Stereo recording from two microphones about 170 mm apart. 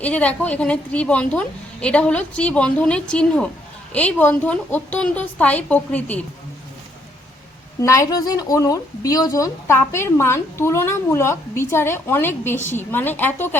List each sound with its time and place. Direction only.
0.0 s speech: 10° left (ahead or behind)
7.8 s speech: 20° left (ahead or behind)